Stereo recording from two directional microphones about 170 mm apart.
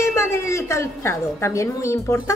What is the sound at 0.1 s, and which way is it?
A woman's voice, 15° left (ahead or behind).